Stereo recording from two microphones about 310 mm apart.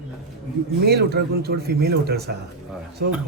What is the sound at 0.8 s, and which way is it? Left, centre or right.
Speech, right.